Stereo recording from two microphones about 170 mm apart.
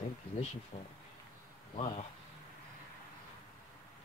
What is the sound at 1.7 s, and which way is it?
Speech, 35° left (ahead or behind).